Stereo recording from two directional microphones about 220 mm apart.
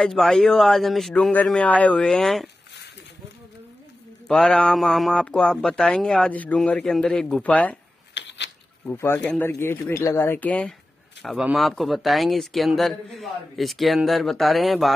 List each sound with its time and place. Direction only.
0.0 s speech: centre (ahead or behind)
4.3 s speech: 5° left (ahead or behind)
8.1 s a sound: 55° left (ahead or behind)
8.8 s speech: 10° left (ahead or behind)